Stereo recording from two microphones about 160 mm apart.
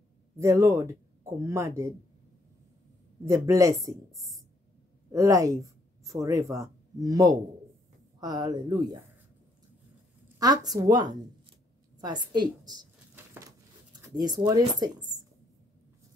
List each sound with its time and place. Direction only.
0.4 s speech: 15° right (ahead or behind)
3.3 s speech: 20° right (ahead or behind)
5.1 s speech: 20° right (ahead or behind)
10.4 s speech: 25° right (ahead or behind)
12.3 s speech: 25° right (ahead or behind)
13.1 s a sound: 15° right (ahead or behind)
14.4 s speech: 25° right (ahead or behind)